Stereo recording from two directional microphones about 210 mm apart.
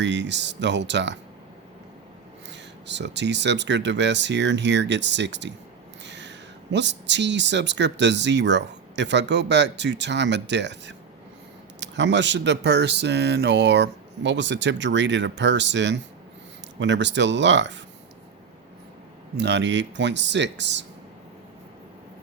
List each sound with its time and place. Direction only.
0.0 s speech: 55° right (ahead or behind)
2.5 s speech: 55° right (ahead or behind)
19.4 s speech: 55° right (ahead or behind)